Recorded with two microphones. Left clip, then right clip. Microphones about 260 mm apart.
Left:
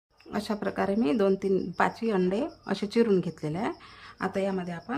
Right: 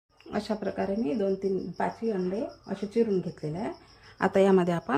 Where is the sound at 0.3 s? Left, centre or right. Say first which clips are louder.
Even; centre.